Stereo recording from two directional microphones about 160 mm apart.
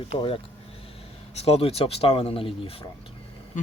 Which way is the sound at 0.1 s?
35° left (ahead or behind).